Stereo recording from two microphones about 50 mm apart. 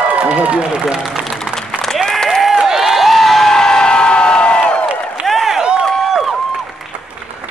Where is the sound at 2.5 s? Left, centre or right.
Centre; by 4.9 s left.